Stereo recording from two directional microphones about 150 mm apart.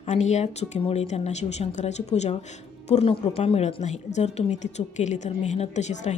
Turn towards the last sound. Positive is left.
turn(degrees=50)  # may be behind; listen again after turning